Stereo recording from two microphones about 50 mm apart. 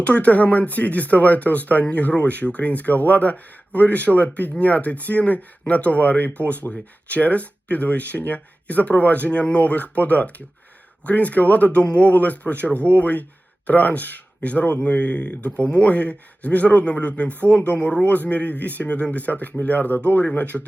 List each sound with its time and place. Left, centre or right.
0.0 s speech: left